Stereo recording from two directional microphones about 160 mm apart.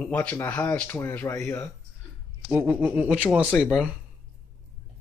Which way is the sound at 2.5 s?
10° right (ahead or behind).